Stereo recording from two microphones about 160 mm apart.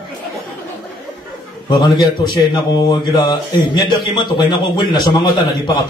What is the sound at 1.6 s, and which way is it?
A man's voice, 25° left (ahead or behind).